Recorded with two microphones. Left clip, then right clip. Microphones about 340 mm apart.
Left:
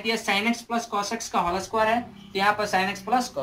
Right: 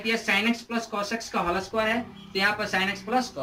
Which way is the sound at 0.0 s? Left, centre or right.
Centre.